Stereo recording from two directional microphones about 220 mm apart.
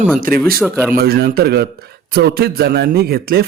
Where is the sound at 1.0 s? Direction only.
45° right (ahead or behind).